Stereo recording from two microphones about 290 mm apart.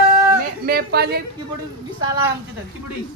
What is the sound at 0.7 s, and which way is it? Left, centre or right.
Speech, right.